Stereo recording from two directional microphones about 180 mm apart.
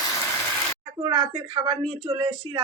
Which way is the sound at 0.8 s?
30° right (ahead or behind).